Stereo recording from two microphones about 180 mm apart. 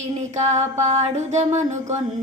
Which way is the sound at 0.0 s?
40° right (ahead or behind).